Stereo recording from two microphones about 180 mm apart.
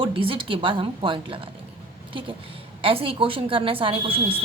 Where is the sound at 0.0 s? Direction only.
30° right (ahead or behind).